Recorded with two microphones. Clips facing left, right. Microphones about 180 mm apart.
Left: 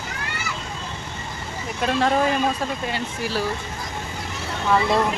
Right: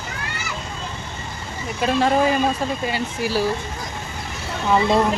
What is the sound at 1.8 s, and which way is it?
Speech, 5° right (ahead or behind).